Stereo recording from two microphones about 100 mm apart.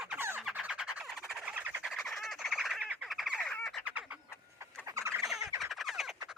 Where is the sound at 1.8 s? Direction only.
Centre (ahead or behind).